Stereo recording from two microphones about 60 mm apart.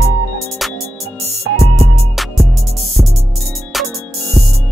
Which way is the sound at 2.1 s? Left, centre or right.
Centre.